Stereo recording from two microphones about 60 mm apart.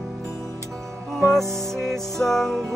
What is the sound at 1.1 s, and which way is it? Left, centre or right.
Music, centre.